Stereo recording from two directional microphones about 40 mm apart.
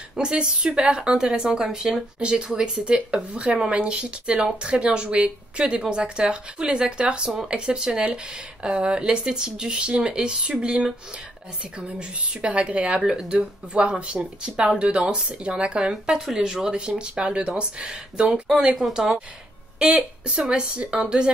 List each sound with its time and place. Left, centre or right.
0.1 s speech: right
13.3 s speech: right
16.3 s speech: centre
17.0 s speech: right
20.2 s speech: right